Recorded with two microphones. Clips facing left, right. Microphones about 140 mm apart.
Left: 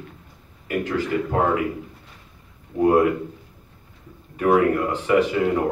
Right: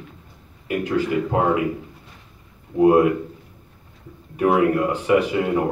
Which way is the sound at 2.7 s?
10° right (ahead or behind).